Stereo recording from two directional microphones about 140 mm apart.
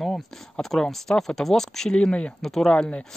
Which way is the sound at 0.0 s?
Centre (ahead or behind).